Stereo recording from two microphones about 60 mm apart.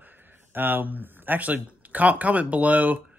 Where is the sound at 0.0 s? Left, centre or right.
Right.